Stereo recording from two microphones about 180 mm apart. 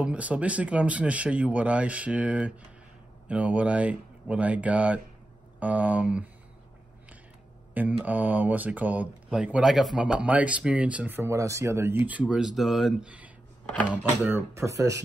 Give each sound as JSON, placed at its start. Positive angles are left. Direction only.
{"t": 0.0, "sound": "speech", "side_deg": -5}
{"t": 7.7, "sound": "speech", "side_deg": -10}